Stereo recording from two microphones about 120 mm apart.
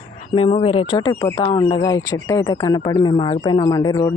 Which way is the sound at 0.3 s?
50° left (ahead or behind).